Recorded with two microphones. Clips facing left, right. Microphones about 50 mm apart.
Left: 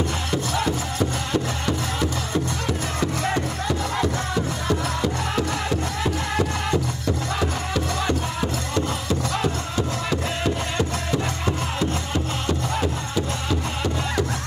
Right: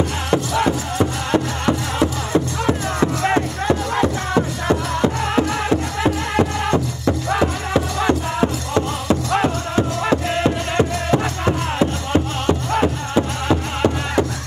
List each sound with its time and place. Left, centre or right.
0.3 s music: right